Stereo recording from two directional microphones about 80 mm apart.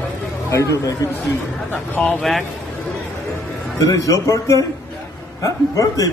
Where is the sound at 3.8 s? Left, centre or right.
Left.